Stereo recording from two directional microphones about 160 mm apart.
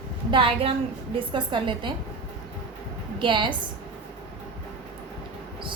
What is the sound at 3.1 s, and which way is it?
Speech, 30° right (ahead or behind).